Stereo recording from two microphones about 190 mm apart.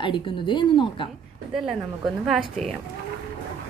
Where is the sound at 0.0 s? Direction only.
25° left (ahead or behind).